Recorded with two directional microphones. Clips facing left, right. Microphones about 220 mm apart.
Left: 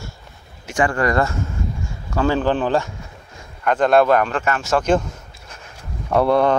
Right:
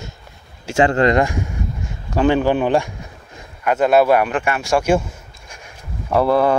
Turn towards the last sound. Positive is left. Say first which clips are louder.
# right 1 dB
turn(degrees=-5)  # may be behind; listen again after turning